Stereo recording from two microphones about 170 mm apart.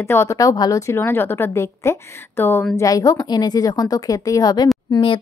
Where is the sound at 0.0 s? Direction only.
15° left (ahead or behind).